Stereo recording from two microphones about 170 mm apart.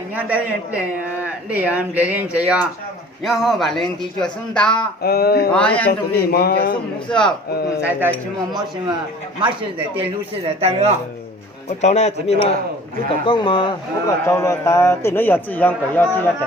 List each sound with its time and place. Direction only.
0.2 s speech: 10° right (ahead or behind)
5.0 s speech: 65° left (ahead or behind)
5.5 s a man's voice: 5° left (ahead or behind)
6.1 s speech: 65° left (ahead or behind)
7.1 s speech: 5° left (ahead or behind)
10.6 s speech: 40° right (ahead or behind)
11.8 s speech: 40° left (ahead or behind)
13.2 s speech: 30° left (ahead or behind)
14.3 s a man's voice: 15° left (ahead or behind)